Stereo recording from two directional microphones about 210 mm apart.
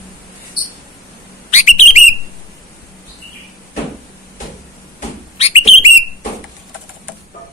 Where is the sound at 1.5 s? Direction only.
35° left (ahead or behind).